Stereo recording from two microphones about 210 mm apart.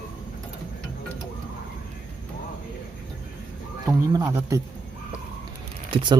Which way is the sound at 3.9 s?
20° right (ahead or behind).